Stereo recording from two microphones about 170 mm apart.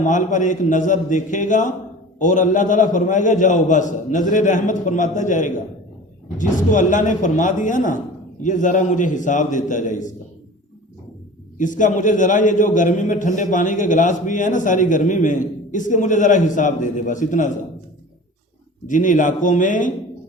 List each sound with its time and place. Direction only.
0.0 s a man's voice: 50° left (ahead or behind)
11.5 s a man's voice: 50° left (ahead or behind)
18.9 s a man's voice: 50° left (ahead or behind)